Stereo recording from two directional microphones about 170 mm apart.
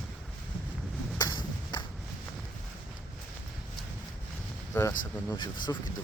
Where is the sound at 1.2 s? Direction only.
25° left (ahead or behind).